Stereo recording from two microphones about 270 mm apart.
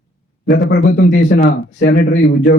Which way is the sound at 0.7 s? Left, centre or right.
Left.